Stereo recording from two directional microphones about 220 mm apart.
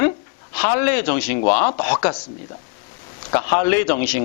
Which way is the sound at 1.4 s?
25° left (ahead or behind).